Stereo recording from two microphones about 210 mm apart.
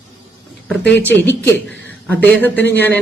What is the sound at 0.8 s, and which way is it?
Speech, 55° left (ahead or behind).